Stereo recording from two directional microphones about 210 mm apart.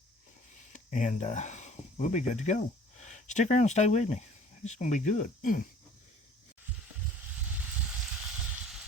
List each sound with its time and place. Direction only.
0.5 s speech: 35° left (ahead or behind)